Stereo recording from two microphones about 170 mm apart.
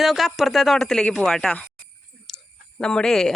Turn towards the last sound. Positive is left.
turn(degrees=5)  # may be behind; listen again after turning